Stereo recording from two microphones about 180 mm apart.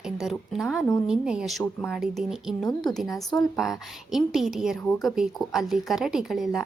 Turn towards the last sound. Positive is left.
turn(degrees=0)  # may be behind; listen again after turning